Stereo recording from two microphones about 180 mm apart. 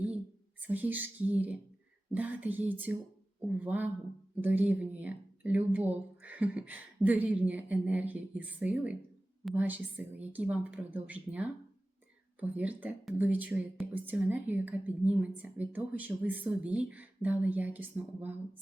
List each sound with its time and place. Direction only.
0.7 s speech: 10° right (ahead or behind)